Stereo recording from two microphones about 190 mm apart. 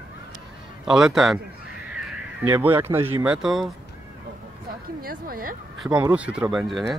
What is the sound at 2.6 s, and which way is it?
Speech, 10° right (ahead or behind).